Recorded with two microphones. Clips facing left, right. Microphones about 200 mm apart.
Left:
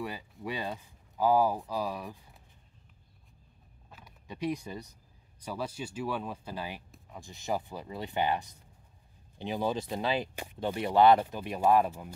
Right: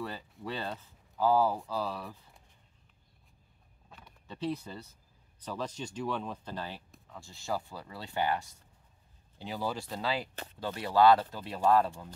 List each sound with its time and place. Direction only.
0.0 s speech: 15° left (ahead or behind)
3.9 s a sound: 5° left (ahead or behind)
4.4 s speech: 15° left (ahead or behind)